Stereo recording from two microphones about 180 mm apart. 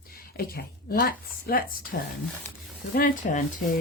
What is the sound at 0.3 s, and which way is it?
Speech, 55° left (ahead or behind).